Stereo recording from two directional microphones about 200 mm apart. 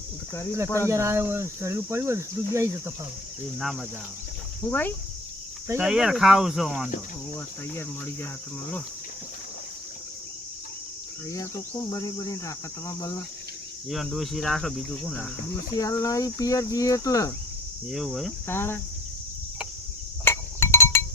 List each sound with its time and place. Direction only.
0.9 s speech: 15° right (ahead or behind)
3.6 s speech: centre (ahead or behind)
4.7 s speech: 10° left (ahead or behind)
5.6 s speech: 10° right (ahead or behind)
7.8 s speech: 10° left (ahead or behind)
11.3 s speech: 15° left (ahead or behind)
13.9 s speech: centre (ahead or behind)
15.8 s speech: 15° left (ahead or behind)
17.9 s speech: centre (ahead or behind)
18.4 s speech: 10° left (ahead or behind)
20.2 s chink: 15° left (ahead or behind)